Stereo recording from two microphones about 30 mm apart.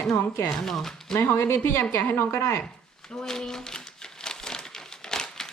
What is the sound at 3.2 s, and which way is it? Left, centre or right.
Crumpling, left.